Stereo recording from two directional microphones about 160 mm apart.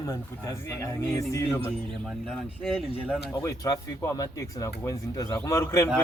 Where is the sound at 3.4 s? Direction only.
20° left (ahead or behind).